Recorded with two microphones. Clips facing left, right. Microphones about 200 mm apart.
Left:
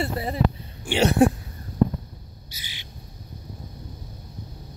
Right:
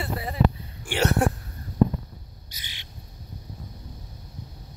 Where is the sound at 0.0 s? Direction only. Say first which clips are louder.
Left 1 dB; 25° left (ahead or behind).